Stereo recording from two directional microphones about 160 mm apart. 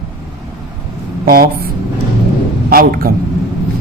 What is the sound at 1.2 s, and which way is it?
Speech, 70° right (ahead or behind).